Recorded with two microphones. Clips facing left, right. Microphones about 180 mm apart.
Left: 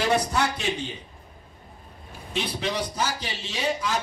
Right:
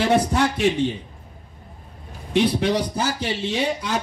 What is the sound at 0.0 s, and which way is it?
Speech, 55° right (ahead or behind).